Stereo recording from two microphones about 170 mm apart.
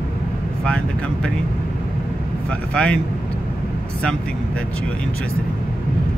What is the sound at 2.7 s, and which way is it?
Speech, 5° left (ahead or behind).